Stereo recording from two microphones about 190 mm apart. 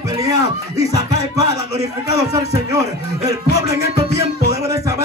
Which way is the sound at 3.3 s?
15° right (ahead or behind).